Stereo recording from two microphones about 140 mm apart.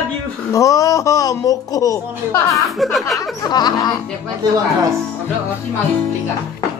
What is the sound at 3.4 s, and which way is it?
Speech, 30° left (ahead or behind).